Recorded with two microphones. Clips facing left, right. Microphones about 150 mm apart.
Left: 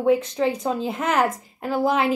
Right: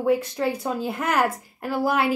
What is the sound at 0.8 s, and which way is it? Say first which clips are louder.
Speech: left 1 dB; 5° right (ahead or behind).